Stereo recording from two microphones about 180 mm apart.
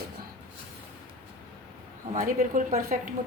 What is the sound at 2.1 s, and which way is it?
Speech, 45° right (ahead or behind).